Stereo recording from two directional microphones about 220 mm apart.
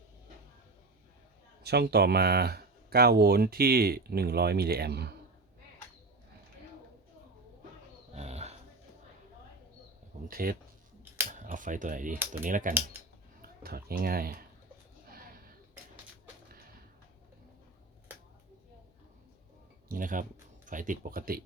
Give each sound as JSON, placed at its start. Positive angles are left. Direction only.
{"t": 1.6, "sound": "speech", "side_deg": -45}
{"t": 8.1, "sound": "dog", "side_deg": -30}
{"t": 10.2, "sound": "speech", "side_deg": -40}
{"t": 19.9, "sound": "speech", "side_deg": -40}